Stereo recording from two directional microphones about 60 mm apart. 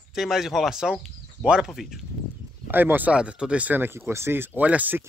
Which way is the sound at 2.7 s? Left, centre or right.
Right.